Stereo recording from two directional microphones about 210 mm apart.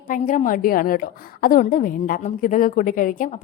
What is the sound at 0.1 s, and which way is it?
A woman's voice, 40° left (ahead or behind).